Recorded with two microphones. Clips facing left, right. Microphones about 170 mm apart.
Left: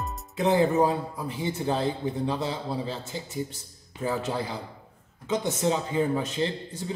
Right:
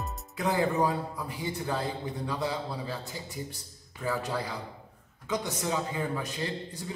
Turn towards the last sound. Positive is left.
turn(degrees=25)  # may be behind; listen again after turning